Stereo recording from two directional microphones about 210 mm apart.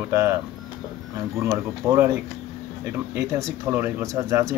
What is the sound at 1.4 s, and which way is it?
Speech, 15° right (ahead or behind).